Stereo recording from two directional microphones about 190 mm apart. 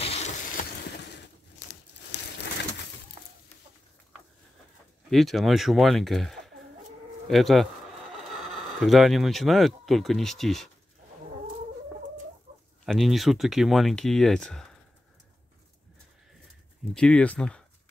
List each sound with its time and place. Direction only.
0.0 s a sound: 35° left (ahead or behind)
0.6 s vehicle: 60° left (ahead or behind)
5.1 s speech: centre (ahead or behind)
12.8 s speech: centre (ahead or behind)
16.9 s speech: 5° left (ahead or behind)